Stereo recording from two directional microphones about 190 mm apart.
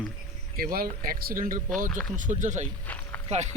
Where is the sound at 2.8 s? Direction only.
10° left (ahead or behind).